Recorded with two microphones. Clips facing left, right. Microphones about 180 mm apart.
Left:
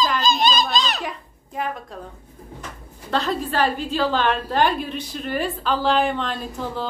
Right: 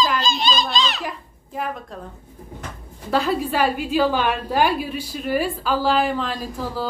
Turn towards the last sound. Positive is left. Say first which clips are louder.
# right 1 dB
turn(degrees=-5)  # may be behind; listen again after turning